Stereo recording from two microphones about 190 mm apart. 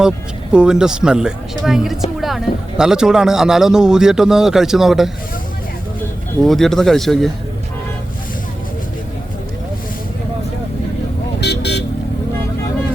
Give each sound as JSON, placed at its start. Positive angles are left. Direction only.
{"t": 0.5, "sound": "speech", "side_deg": -5}
{"t": 6.4, "sound": "speech", "side_deg": 0}
{"t": 11.3, "sound": "vehicle", "side_deg": 60}